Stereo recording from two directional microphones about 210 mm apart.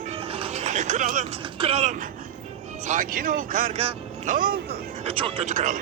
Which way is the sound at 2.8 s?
35° right (ahead or behind).